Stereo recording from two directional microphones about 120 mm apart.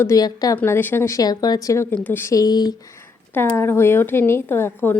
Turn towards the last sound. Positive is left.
turn(degrees=15)  # may be behind; listen again after turning